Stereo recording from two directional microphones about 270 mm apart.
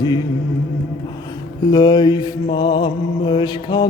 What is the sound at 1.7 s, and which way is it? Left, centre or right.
Mantra, centre.